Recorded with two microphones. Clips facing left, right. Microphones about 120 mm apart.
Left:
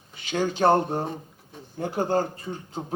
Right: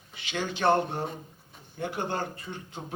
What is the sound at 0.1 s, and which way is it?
A man's voice, 45° left (ahead or behind).